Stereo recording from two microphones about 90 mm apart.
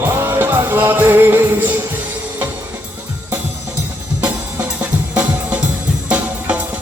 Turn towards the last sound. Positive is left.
turn(degrees=-15)  # may be behind; listen again after turning